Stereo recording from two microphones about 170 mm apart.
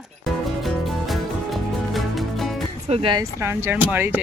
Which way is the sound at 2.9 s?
30° right (ahead or behind).